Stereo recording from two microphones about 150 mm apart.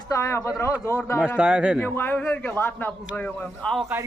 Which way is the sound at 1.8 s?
15° left (ahead or behind).